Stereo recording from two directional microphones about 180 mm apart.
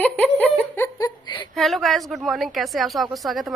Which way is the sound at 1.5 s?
Centre (ahead or behind).